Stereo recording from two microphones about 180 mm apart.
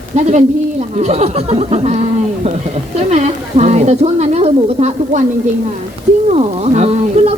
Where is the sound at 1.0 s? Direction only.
40° right (ahead or behind).